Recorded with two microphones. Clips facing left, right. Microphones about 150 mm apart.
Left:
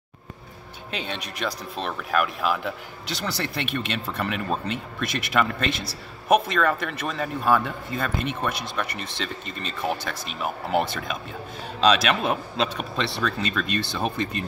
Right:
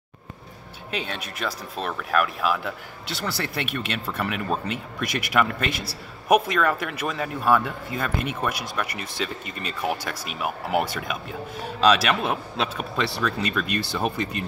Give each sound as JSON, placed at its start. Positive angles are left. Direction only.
{"t": 0.9, "sound": "speech", "side_deg": -5}